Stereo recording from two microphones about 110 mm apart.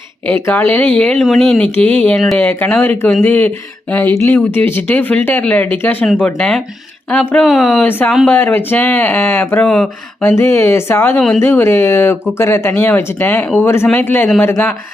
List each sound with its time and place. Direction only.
0.3 s speech: 20° left (ahead or behind)
7.4 s speech: centre (ahead or behind)
7.9 s speech: 20° left (ahead or behind)
9.6 s speech: 5° left (ahead or behind)
10.2 s speech: 20° left (ahead or behind)